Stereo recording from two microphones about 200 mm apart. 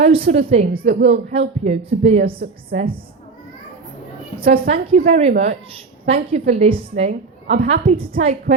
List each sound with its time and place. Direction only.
0.0 s a woman's voice: 30° right (ahead or behind)
4.6 s a woman's voice: 30° right (ahead or behind)